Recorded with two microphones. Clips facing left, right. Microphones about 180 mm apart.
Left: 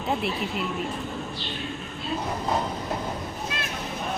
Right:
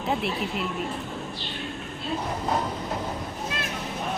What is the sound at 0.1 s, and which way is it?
Speech, centre (ahead or behind).